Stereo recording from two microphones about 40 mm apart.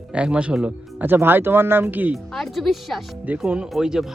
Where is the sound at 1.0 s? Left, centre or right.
Right.